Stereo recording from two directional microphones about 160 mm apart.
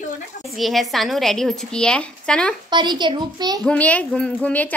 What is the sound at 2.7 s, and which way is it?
Speech, 30° right (ahead or behind).